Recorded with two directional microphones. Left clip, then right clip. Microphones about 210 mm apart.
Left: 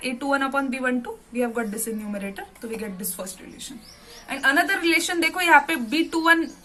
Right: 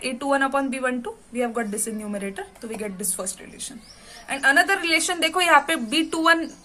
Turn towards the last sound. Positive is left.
turn(degrees=-25)  # may be behind; listen again after turning